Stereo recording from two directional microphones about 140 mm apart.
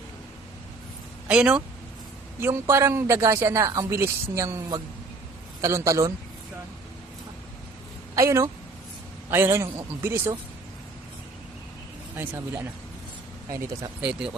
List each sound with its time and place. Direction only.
1.3 s a man's voice: 5° right (ahead or behind)
2.4 s speech: 20° right (ahead or behind)
8.1 s a man's voice: 20° right (ahead or behind)
12.1 s a man's voice: 15° right (ahead or behind)
14.0 s speech: 5° right (ahead or behind)